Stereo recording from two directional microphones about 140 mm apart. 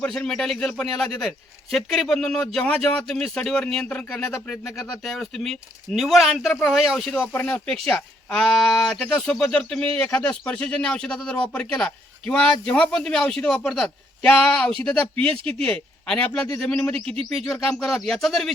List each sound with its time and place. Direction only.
0.0 s speech: 5° left (ahead or behind)
15.3 s speech: 40° right (ahead or behind)
15.6 s speech: 5° left (ahead or behind)